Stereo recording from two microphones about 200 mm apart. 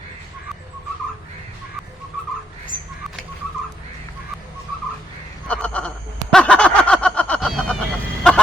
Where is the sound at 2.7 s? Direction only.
25° right (ahead or behind).